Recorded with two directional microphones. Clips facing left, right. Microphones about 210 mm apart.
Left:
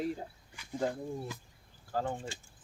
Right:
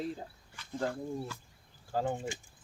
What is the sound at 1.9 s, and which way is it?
Speech, 20° right (ahead or behind).